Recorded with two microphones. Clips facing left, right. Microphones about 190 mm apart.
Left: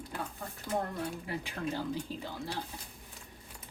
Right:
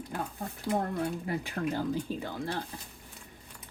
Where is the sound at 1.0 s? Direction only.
45° right (ahead or behind).